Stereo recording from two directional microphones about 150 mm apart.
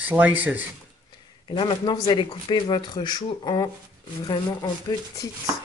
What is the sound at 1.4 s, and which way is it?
Speech, 35° left (ahead or behind).